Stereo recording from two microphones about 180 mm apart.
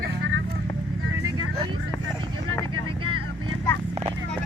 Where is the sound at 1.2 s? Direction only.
25° right (ahead or behind).